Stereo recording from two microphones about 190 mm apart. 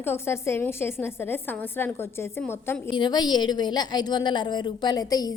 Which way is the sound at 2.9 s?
25° left (ahead or behind).